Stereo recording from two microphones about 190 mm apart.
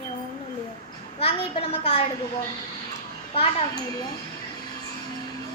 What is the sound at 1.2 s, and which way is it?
Speech, 30° left (ahead or behind).